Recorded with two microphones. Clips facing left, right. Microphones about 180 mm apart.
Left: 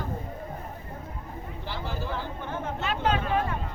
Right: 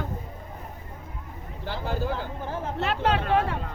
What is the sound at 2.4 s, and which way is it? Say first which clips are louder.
Chatter: right 2 dB; 35° right (ahead or behind).